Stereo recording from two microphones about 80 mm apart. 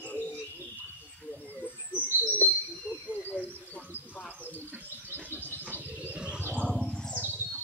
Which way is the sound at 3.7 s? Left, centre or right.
Centre.